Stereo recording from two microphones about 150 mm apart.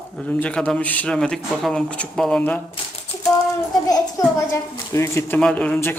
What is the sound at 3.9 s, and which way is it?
A child's voice, 25° left (ahead or behind).